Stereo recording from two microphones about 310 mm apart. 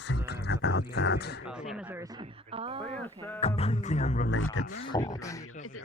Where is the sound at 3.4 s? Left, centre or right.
Centre.